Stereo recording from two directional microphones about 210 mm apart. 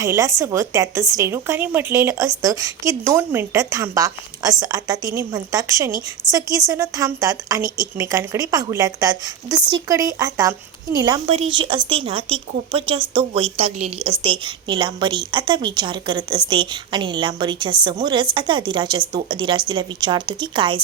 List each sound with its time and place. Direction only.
0.0 s a woman's voice: 15° right (ahead or behind)
6.2 s a woman's voice: 10° left (ahead or behind)
6.7 s a woman's voice: 15° right (ahead or behind)